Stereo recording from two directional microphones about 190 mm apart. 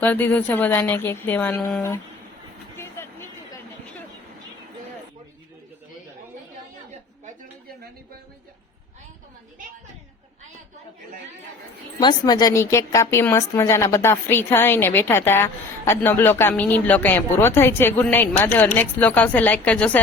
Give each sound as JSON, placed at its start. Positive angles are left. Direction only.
{"t": 0.0, "sound": "a woman's voice", "side_deg": 10}
{"t": 2.7, "sound": "music", "side_deg": 15}
{"t": 11.9, "sound": "a woman's voice", "side_deg": 20}